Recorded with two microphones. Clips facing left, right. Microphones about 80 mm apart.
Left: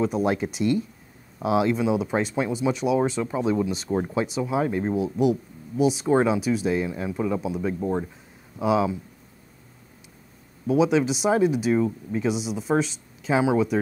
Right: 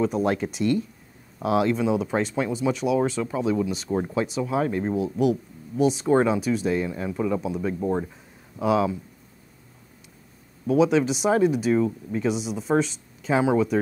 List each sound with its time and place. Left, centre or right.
0.0 s speech: centre
7.8 s speech: centre
8.5 s speech: centre
10.7 s speech: centre